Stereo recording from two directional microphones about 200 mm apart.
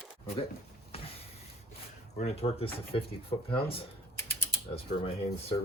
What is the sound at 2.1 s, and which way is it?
Speech, 30° left (ahead or behind).